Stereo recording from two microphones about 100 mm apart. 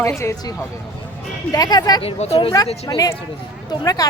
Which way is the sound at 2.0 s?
85° left.